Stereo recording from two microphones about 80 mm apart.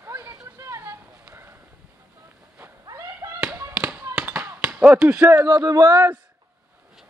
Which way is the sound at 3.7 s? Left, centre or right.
Centre.